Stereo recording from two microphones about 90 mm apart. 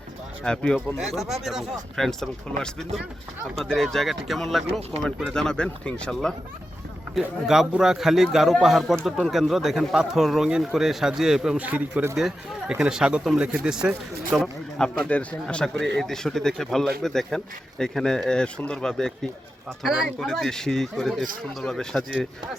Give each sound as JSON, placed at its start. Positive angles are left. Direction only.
{"t": 0.4, "sound": "a man's voice", "side_deg": 10}
{"t": 1.0, "sound": "a man's voice", "side_deg": 0}
{"t": 7.2, "sound": "speech", "side_deg": -5}
{"t": 11.6, "sound": "speech", "side_deg": -15}
{"t": 14.4, "sound": "a man's voice", "side_deg": 10}
{"t": 19.8, "sound": "speech", "side_deg": -5}
{"t": 20.1, "sound": "speech", "side_deg": 5}